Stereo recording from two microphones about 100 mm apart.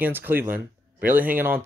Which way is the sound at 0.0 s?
20° right (ahead or behind).